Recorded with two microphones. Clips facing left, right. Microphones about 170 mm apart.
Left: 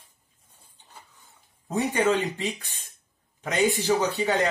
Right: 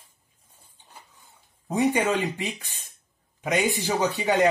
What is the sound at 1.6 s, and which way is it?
Speech, 15° right (ahead or behind).